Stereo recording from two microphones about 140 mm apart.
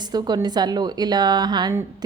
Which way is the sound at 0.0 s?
30° right (ahead or behind).